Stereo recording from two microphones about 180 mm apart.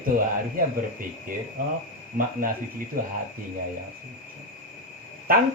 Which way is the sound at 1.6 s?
50° right (ahead or behind).